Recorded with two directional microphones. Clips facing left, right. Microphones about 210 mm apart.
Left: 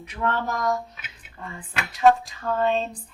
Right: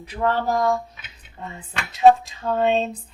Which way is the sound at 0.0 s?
35° right (ahead or behind).